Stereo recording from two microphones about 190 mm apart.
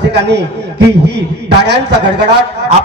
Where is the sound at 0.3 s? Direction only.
60° right (ahead or behind).